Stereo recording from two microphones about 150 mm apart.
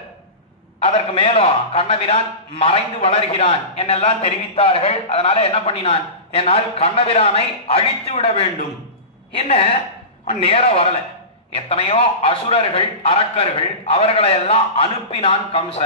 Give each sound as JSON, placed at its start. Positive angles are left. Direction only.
{"t": 0.7, "sound": "a man's voice", "side_deg": 40}